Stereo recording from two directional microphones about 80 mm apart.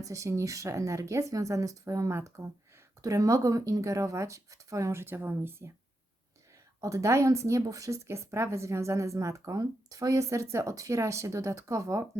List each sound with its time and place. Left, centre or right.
0.0 s speech: right
6.8 s speech: right